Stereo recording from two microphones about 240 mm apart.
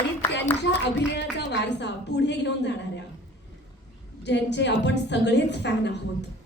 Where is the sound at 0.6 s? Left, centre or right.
Left.